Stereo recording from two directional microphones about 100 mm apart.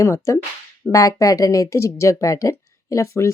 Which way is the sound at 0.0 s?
30° left (ahead or behind).